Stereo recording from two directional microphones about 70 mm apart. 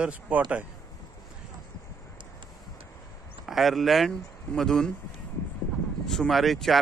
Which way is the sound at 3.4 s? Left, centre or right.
Centre.